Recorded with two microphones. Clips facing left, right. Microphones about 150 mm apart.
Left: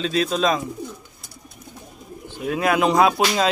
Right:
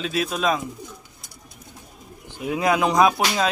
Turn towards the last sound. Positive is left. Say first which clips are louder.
# left 1 dB
turn(degrees=20)  # may be behind; listen again after turning